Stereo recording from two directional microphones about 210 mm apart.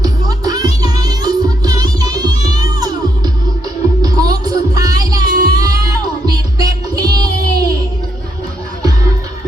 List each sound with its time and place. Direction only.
0.0 s music: 20° right (ahead or behind)